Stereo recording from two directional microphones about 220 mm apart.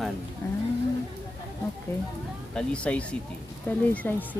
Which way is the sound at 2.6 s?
5° left (ahead or behind).